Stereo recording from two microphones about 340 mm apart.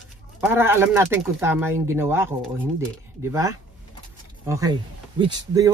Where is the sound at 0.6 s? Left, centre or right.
Centre.